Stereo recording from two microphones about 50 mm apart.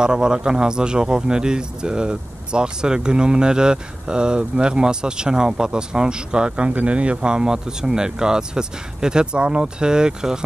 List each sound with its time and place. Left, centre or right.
0.0 s speech: centre